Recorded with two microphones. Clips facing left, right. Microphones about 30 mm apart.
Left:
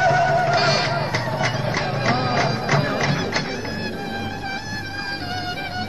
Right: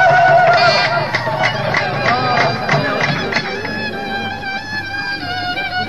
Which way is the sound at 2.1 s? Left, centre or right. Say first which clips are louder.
Right 6 dB; right.